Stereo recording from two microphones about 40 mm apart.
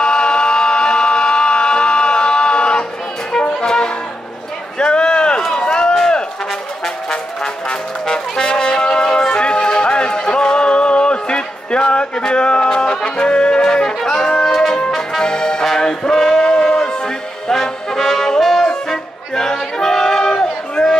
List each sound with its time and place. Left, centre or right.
0.0 s a sound: left
3.6 s music: centre
4.7 s a sound: left
5.6 s run: left
7.6 s music: left
15.0 s brass instrument: centre
15.6 s music: centre